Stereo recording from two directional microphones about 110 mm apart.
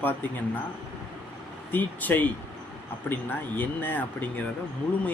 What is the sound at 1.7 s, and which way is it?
Speech, 15° left (ahead or behind).